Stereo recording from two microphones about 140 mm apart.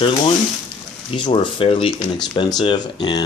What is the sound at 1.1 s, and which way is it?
Speech, 35° left (ahead or behind).